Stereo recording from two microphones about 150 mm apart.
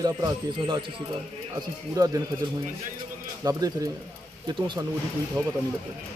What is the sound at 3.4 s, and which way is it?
Speech, 25° right (ahead or behind).